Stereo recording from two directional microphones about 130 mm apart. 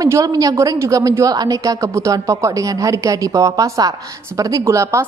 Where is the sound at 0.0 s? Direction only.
30° right (ahead or behind).